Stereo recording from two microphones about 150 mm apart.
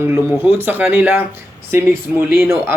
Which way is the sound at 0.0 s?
15° right (ahead or behind).